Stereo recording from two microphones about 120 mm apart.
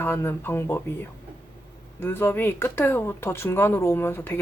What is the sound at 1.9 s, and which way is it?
Speech, 20° left (ahead or behind).